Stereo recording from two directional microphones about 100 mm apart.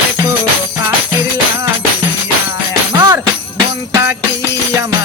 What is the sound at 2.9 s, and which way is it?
Jingle bell, 40° right (ahead or behind).